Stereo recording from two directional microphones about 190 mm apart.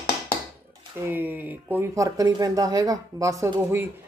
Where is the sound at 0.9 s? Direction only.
10° right (ahead or behind).